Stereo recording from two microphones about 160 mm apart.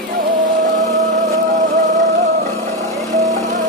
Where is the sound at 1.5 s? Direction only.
50° right (ahead or behind).